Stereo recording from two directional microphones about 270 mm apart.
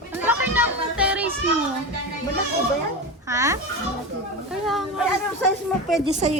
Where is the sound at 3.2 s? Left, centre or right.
Centre.